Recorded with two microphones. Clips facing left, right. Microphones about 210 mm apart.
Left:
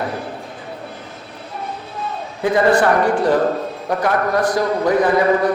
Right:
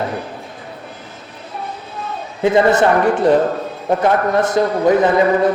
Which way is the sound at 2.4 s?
20° right (ahead or behind).